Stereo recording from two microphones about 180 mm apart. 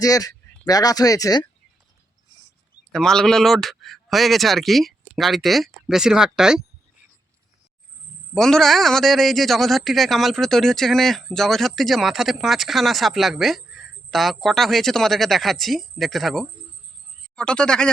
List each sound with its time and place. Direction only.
0.0 s speech: 20° left (ahead or behind)
2.9 s speech: 5° left (ahead or behind)
8.4 s a man's voice: centre (ahead or behind)